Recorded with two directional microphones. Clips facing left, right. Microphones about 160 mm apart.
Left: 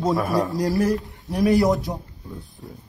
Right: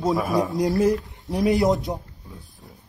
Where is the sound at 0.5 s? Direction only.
20° right (ahead or behind).